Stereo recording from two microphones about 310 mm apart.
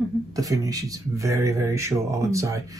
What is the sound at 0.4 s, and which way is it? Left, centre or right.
A man's voice, centre.